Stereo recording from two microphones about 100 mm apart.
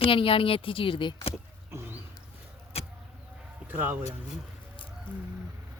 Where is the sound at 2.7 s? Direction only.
85° left.